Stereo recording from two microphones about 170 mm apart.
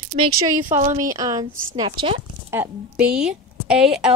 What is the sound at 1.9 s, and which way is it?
Speech, 30° right (ahead or behind).